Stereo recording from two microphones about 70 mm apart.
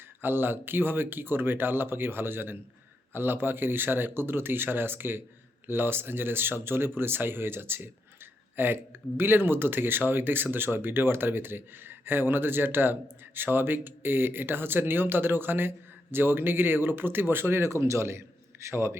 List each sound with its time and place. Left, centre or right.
0.2 s speech: right